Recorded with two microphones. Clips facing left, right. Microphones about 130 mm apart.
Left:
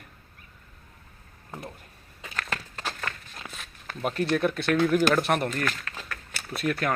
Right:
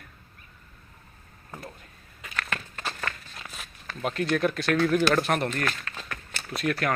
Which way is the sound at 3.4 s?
15° left (ahead or behind).